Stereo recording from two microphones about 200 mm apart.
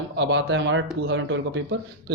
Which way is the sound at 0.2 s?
60° right (ahead or behind).